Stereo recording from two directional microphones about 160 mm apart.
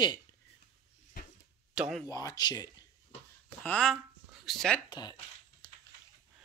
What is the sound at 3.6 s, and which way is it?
Speech, 5° left (ahead or behind).